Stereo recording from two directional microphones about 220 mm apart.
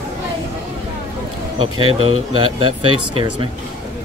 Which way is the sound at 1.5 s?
20° right (ahead or behind).